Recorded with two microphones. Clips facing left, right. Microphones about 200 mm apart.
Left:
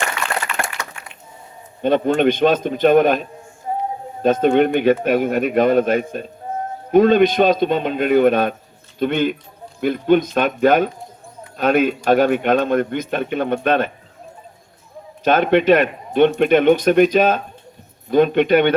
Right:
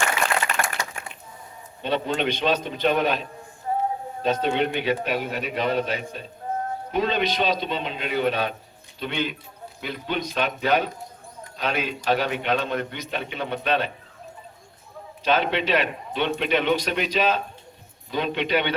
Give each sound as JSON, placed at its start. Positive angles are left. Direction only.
{"t": 0.5, "sound": "a sound", "side_deg": -40}
{"t": 1.8, "sound": "speech", "side_deg": 50}
{"t": 3.7, "sound": "music", "side_deg": 20}
{"t": 4.2, "sound": "speech", "side_deg": 50}
{"t": 15.2, "sound": "speech", "side_deg": 50}